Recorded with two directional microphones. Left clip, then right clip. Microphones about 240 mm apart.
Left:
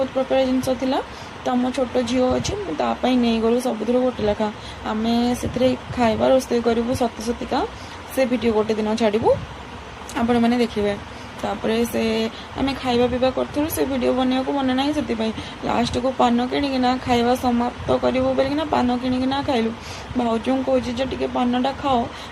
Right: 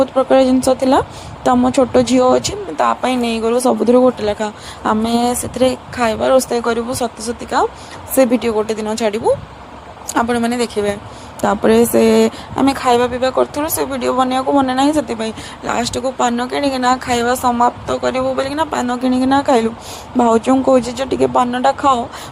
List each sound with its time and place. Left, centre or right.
0.2 s speech: right